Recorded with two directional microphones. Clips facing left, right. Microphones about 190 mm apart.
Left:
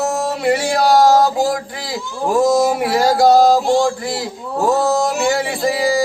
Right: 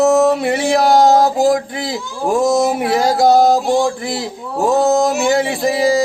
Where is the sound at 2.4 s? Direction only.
20° right (ahead or behind).